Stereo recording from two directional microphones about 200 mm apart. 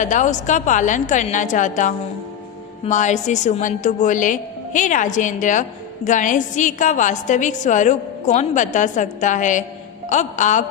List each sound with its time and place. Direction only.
0.0 s a woman's voice: 40° left (ahead or behind)